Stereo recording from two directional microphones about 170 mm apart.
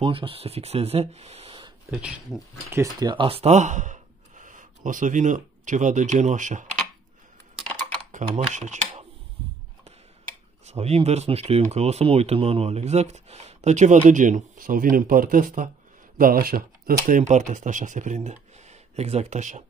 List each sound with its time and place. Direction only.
0.0 s speech: 30° right (ahead or behind)
1.9 s speech: 5° right (ahead or behind)
2.7 s speech: 20° right (ahead or behind); by 6.8 s 45° right (ahead or behind)
8.1 s speech: 45° right (ahead or behind)
10.6 s speech: 40° right (ahead or behind); by 16.9 s 60° right (ahead or behind)
17.1 s speech: 45° right (ahead or behind)